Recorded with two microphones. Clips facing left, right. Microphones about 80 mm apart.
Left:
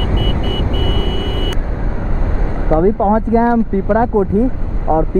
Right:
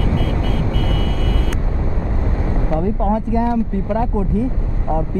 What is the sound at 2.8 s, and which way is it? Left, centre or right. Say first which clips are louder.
Speech: left 8 dB; left.